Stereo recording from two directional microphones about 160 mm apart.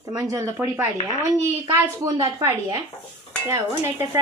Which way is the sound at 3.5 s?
15° right (ahead or behind).